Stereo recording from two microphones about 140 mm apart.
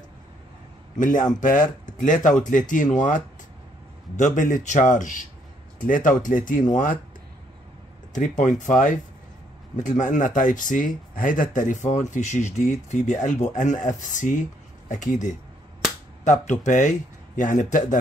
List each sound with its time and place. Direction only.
0.9 s speech: 70° left (ahead or behind)
8.1 s speech: 65° left (ahead or behind)